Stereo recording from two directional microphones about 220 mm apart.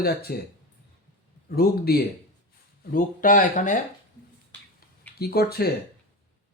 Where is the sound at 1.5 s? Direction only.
45° left (ahead or behind).